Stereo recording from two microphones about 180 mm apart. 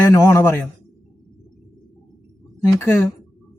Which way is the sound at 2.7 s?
15° left (ahead or behind).